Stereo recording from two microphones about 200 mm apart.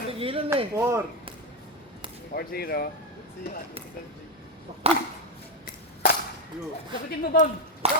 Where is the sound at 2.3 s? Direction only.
50° left (ahead or behind).